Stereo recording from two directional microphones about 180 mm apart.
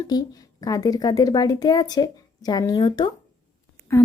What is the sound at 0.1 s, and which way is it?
A woman's voice, 25° left (ahead or behind).